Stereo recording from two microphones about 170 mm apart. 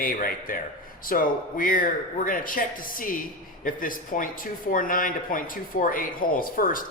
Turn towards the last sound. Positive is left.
turn(degrees=55)  # may be behind; listen again after turning